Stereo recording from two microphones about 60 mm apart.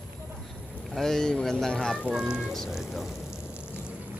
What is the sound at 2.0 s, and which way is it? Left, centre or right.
Speech, centre.